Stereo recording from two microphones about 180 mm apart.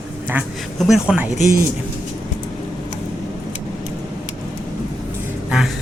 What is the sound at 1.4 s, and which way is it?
Speech, 50° right (ahead or behind).